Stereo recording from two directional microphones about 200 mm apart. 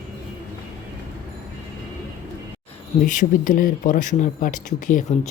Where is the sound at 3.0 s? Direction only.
40° left (ahead or behind).